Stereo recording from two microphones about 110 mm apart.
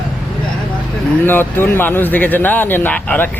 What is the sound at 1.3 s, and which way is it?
Speech, 20° left (ahead or behind).